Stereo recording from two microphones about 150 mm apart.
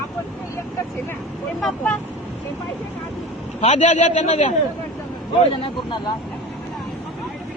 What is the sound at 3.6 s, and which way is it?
Speech, 50° left (ahead or behind).